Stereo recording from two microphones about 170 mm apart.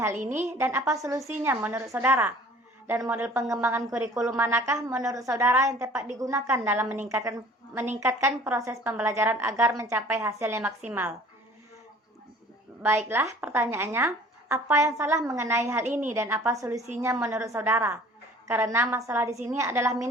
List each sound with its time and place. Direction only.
0.2 s a woman's voice: 50° right (ahead or behind)
0.9 s a woman's voice: 20° right (ahead or behind)
13.1 s a woman's voice: 15° right (ahead or behind)